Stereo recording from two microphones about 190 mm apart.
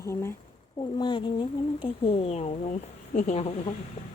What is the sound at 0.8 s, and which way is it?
Speech, 25° left (ahead or behind).